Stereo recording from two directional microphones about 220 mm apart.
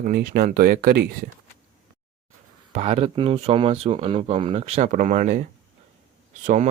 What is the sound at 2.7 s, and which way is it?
Speech, 25° right (ahead or behind).